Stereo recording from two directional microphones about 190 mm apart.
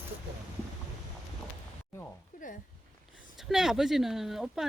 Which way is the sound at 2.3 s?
45° left (ahead or behind).